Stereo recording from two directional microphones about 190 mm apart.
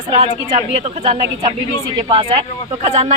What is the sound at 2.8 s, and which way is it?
Speech, 35° right (ahead or behind).